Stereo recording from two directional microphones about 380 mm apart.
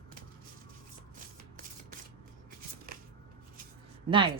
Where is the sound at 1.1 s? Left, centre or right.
Right.